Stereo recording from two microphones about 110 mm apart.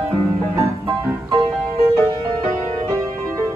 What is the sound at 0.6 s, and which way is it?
Music, 30° right (ahead or behind).